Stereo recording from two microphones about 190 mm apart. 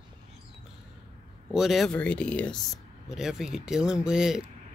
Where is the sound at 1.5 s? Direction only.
Centre (ahead or behind).